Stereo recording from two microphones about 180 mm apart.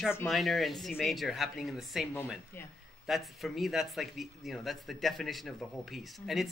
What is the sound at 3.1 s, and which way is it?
Speech, centre (ahead or behind).